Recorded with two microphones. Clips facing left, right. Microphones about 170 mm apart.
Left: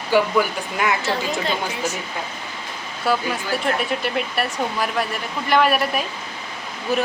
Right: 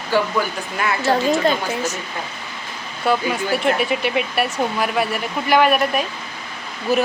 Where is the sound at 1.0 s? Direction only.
40° right (ahead or behind).